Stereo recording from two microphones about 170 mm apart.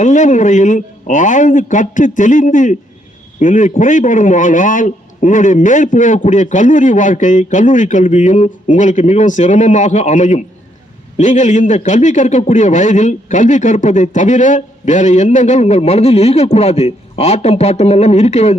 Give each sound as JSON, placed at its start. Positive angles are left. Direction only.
{"t": 0.0, "sound": "a man's voice", "side_deg": 45}